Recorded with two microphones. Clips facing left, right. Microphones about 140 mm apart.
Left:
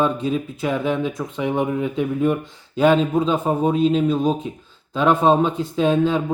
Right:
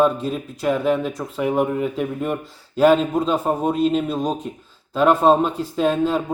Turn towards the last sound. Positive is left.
turn(degrees=-5)  # may be behind; listen again after turning